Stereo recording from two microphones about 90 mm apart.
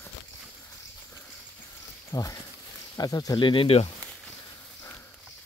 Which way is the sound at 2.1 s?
40° left (ahead or behind).